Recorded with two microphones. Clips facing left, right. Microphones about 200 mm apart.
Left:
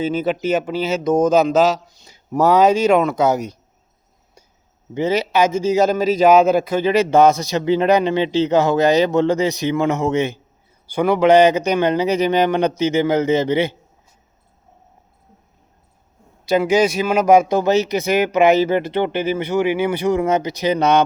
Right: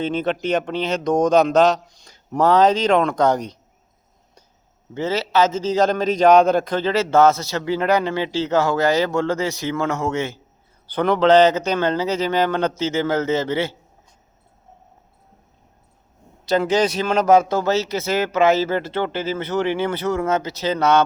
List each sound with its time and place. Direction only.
0.0 s speech: 5° left (ahead or behind)
4.9 s a man's voice: 15° left (ahead or behind)
16.5 s a man's voice: 10° left (ahead or behind)